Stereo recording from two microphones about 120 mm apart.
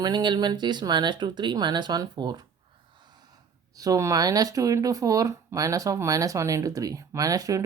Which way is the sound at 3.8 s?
30° right (ahead or behind).